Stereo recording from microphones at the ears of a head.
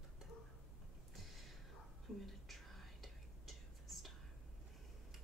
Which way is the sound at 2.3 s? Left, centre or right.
Centre.